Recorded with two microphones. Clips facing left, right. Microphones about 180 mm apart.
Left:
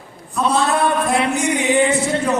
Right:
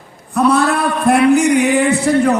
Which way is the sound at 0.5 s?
60° right (ahead or behind).